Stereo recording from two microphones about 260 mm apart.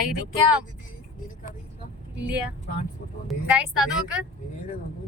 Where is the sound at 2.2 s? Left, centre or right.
Centre.